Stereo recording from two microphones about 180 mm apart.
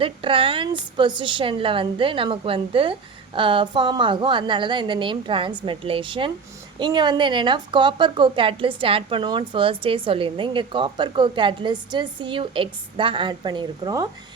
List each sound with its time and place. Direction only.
0.0 s a woman's voice: 30° right (ahead or behind)